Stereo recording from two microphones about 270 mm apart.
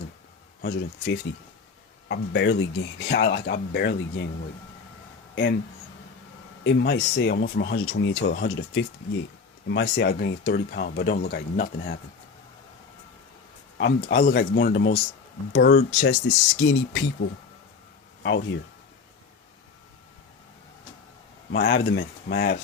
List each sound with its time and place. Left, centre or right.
0.6 s speech: left
5.3 s speech: left
6.7 s speech: left
13.7 s speech: left
21.5 s speech: left